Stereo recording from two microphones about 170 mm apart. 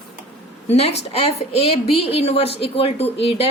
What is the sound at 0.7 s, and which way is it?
Speech, 40° left (ahead or behind).